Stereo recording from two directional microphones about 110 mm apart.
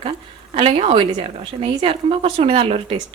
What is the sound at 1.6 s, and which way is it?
A woman's voice, 65° right (ahead or behind).